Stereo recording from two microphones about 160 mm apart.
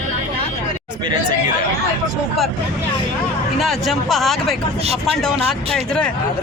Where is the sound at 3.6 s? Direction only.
Centre (ahead or behind).